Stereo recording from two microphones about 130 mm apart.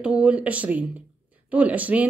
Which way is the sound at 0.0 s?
10° right (ahead or behind).